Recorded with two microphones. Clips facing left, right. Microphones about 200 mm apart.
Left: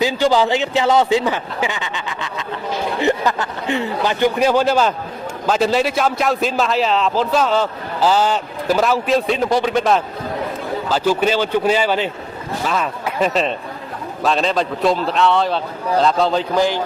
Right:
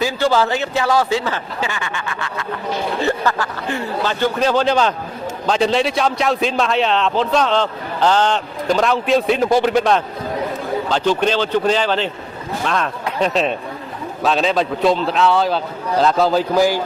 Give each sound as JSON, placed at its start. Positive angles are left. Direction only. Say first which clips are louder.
{"t": 0.0, "sound": "a man's voice", "louder": "left 1 dB", "side_deg": 15}